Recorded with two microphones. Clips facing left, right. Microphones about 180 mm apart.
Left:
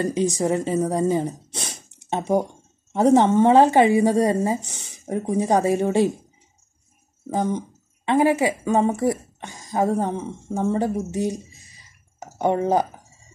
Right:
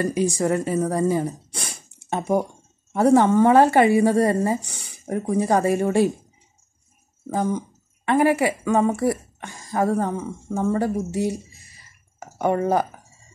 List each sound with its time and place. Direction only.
0.1 s speech: 15° right (ahead or behind)
0.4 s speech: 20° left (ahead or behind)
7.3 s speech: 20° left (ahead or behind)
11.5 s a sound: 15° left (ahead or behind)